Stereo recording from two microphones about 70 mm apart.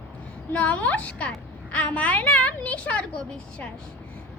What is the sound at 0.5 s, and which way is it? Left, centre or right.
A woman's voice, centre.